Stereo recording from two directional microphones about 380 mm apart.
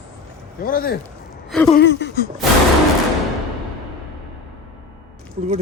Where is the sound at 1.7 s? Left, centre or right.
Left.